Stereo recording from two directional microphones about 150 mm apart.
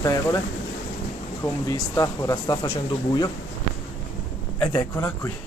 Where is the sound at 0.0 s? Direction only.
20° left (ahead or behind).